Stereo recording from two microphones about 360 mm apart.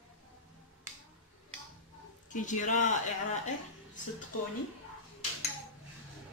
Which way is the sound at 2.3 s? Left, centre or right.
Left.